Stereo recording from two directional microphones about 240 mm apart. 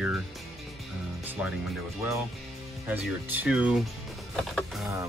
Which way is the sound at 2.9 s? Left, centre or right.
Centre.